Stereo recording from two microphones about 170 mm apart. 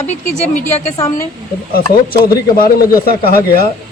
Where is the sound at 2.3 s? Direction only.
60° left (ahead or behind).